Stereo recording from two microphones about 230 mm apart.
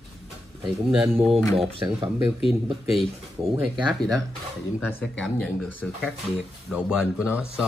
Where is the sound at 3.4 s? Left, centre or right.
Right.